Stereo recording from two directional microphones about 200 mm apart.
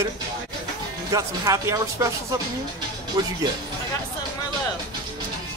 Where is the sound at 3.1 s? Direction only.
20° right (ahead or behind).